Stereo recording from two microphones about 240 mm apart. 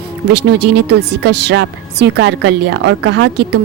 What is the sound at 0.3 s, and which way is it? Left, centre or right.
Speech, right.